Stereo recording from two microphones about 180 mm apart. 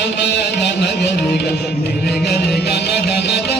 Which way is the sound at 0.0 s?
70° left (ahead or behind).